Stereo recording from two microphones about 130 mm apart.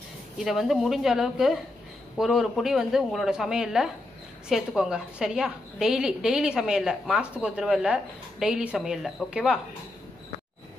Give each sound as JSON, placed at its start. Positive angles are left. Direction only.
{"t": 0.4, "sound": "a woman's voice", "side_deg": 0}